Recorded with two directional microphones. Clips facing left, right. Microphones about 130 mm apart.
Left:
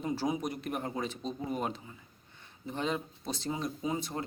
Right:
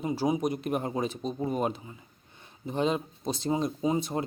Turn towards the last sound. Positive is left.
turn(degrees=-20)  # may be behind; listen again after turning